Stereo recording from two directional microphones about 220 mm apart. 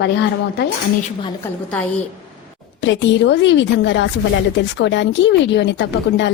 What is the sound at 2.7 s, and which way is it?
Speech, 55° left (ahead or behind).